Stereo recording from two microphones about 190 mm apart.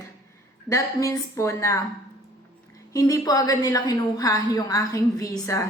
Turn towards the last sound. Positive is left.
turn(degrees=15)  # may be behind; listen again after turning